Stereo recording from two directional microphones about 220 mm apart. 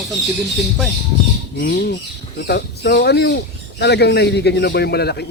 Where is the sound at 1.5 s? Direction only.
45° left (ahead or behind).